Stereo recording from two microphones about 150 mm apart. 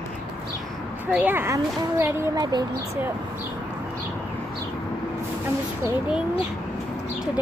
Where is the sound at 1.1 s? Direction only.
10° right (ahead or behind).